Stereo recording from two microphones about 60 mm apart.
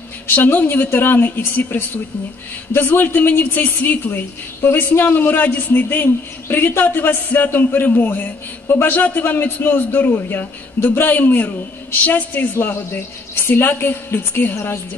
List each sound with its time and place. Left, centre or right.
0.3 s a woman's voice: left
2.9 s a woman's voice: left